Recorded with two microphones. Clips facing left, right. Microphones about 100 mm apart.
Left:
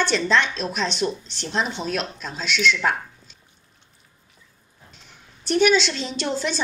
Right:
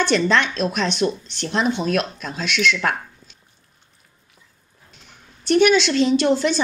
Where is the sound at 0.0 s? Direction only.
60° right (ahead or behind).